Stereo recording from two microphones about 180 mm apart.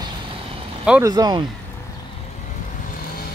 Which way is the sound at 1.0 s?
20° right (ahead or behind).